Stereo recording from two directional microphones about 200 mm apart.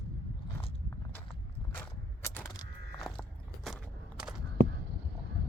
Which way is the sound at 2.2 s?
15° left (ahead or behind).